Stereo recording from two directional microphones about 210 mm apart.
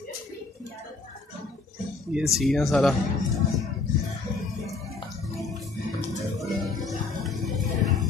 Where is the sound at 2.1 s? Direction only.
Centre (ahead or behind).